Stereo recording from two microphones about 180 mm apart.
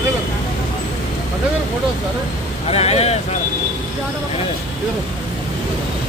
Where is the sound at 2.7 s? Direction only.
35° left (ahead or behind).